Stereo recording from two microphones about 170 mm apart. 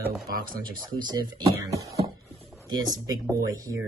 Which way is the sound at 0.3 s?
55° right (ahead or behind).